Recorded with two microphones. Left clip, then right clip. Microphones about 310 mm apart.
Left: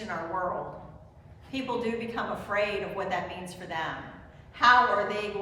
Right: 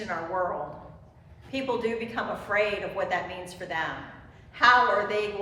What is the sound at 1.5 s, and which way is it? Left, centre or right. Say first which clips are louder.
A woman's voice: right 3 dB; centre.